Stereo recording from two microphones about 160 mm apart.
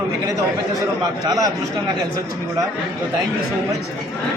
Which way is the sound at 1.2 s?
25° right (ahead or behind).